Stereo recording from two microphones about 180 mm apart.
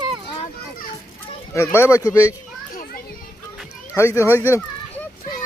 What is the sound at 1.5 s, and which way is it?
Speech, 15° left (ahead or behind).